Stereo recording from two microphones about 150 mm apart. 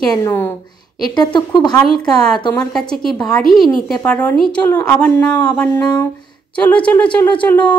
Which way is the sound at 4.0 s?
10° left (ahead or behind).